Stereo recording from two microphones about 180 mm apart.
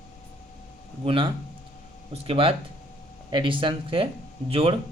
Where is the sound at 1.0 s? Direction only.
30° right (ahead or behind).